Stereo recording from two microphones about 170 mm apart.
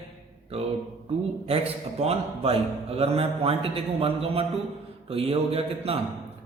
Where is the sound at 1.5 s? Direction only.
35° right (ahead or behind).